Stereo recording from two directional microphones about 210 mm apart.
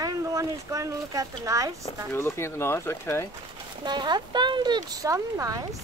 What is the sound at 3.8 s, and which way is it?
Speech, 20° right (ahead or behind).